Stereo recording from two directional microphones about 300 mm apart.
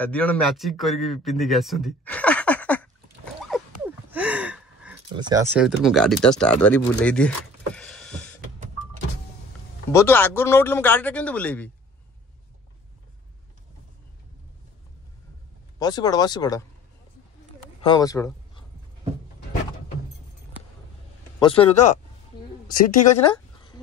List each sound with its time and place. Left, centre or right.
0.0 s a man's voice: centre
3.5 s dog: centre
3.8 s gasp: centre
5.1 s speech: centre
9.9 s speech: centre
15.8 s speech: centre
17.8 s speech: centre
21.4 s speech: centre
23.3 s a sound: centre